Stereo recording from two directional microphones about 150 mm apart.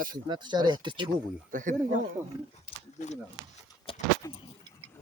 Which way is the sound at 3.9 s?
40° left (ahead or behind).